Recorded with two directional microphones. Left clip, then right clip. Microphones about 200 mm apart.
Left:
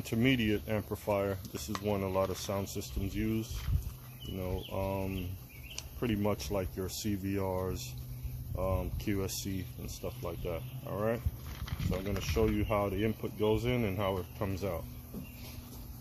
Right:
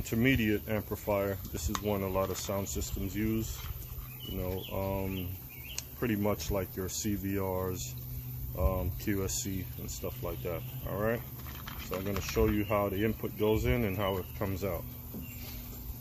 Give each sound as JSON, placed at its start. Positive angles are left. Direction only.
{"t": 0.0, "sound": "speech", "side_deg": 20}
{"t": 11.6, "sound": "a sound", "side_deg": 0}
{"t": 12.2, "sound": "speech", "side_deg": 15}